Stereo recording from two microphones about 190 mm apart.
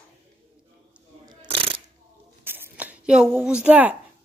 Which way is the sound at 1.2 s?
30° right (ahead or behind).